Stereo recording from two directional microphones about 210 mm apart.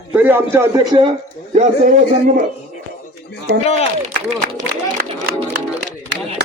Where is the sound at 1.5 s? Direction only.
35° right (ahead or behind).